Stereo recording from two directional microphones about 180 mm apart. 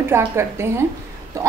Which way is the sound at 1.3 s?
15° right (ahead or behind).